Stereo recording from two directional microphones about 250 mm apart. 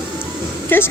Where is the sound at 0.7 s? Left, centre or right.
Centre.